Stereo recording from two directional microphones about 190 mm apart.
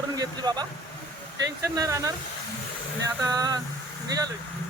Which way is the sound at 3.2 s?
20° right (ahead or behind).